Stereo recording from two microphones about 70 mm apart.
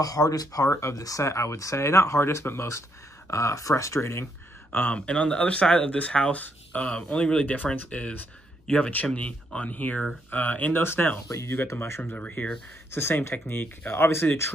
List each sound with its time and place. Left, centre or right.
0.0 s speech: left
0.7 s speech: left
4.9 s speech: centre
10.8 s speech: left
11.2 s speech: left
11.7 s speech: left
12.1 s speech: left
12.9 s speech: left